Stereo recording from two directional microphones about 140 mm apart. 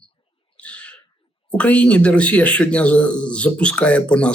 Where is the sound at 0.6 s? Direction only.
10° left (ahead or behind).